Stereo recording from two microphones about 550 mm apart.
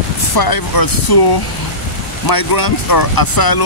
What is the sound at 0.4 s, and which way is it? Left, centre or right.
Speech, left.